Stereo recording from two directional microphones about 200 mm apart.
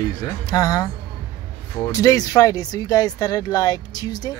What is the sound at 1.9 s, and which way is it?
Speech, 20° left (ahead or behind).